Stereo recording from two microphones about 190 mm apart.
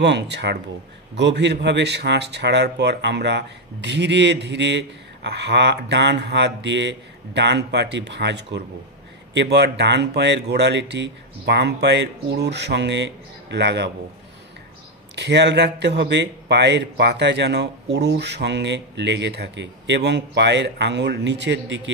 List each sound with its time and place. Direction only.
0.0 s speech: 65° right (ahead or behind)
15.1 s speech: 65° right (ahead or behind)